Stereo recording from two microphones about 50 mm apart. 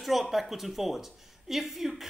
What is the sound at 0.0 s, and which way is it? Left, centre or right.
A woman's voice, centre.